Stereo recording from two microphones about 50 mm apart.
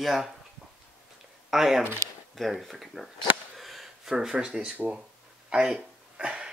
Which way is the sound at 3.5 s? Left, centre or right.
Centre.